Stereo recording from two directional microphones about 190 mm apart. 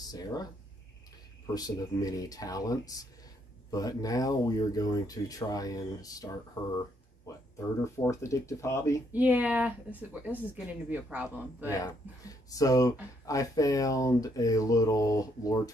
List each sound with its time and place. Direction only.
0.1 s speech: 20° left (ahead or behind)
1.5 s speech: 20° left (ahead or behind)
9.1 s speech: 10° right (ahead or behind)
11.7 s speech: 20° left (ahead or behind)